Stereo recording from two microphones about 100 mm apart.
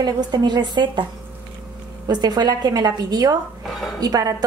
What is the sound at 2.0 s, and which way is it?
A woman's voice, 45° right (ahead or behind).